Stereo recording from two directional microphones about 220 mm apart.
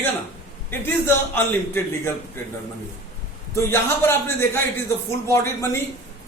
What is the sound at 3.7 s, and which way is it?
A man's voice, 10° left (ahead or behind).